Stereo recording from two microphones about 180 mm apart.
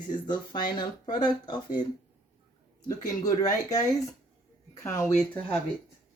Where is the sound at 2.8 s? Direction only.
20° left (ahead or behind).